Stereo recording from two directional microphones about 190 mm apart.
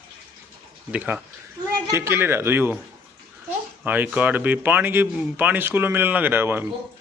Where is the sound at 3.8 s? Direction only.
10° right (ahead or behind).